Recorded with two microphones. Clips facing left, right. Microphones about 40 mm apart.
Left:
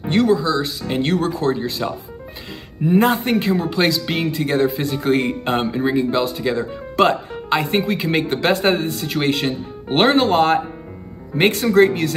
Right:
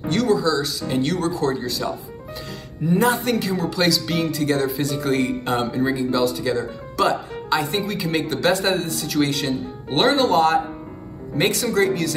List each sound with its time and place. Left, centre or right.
0.0 s speech: left